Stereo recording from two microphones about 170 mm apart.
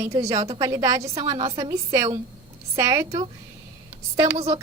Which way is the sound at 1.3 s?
30° right (ahead or behind).